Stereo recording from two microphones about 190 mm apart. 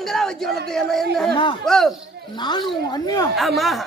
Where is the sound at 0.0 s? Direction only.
Centre (ahead or behind).